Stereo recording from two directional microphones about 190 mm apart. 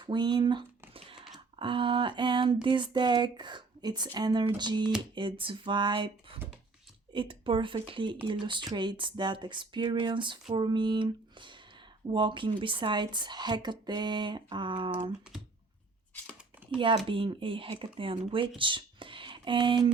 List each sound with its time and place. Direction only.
0.0 s a sound: 25° right (ahead or behind)
1.5 s speech: 25° right (ahead or behind)
16.7 s speech: 25° right (ahead or behind)